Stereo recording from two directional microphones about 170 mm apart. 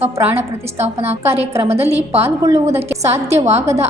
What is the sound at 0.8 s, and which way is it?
A woman's voice, 40° right (ahead or behind).